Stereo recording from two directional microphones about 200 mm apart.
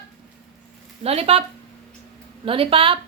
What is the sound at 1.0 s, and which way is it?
Speech, 30° right (ahead or behind).